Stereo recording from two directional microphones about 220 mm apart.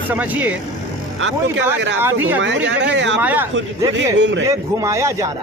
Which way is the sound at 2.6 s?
55° right (ahead or behind).